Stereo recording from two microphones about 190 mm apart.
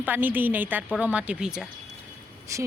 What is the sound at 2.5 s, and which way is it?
Speech, 15° right (ahead or behind).